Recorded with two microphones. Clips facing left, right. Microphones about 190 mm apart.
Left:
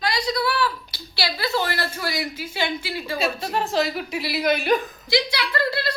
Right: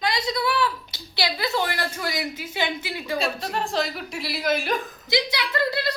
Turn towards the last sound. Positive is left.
turn(degrees=-20)  # may be behind; listen again after turning